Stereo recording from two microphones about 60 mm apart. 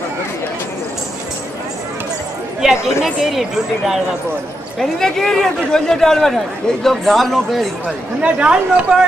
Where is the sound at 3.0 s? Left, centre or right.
Centre.